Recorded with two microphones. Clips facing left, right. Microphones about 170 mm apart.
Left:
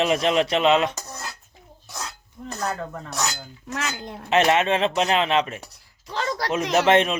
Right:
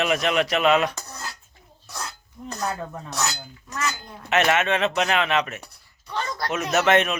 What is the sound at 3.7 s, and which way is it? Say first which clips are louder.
Speech: even; 85° left.